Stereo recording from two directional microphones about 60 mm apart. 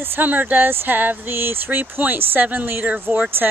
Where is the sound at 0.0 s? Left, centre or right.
Right.